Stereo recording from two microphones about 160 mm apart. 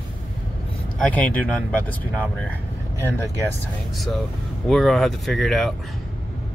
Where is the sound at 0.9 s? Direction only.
10° left (ahead or behind).